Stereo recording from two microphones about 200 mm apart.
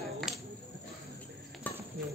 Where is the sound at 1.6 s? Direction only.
10° left (ahead or behind).